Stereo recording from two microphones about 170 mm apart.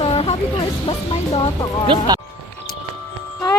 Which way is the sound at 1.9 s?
25° right (ahead or behind).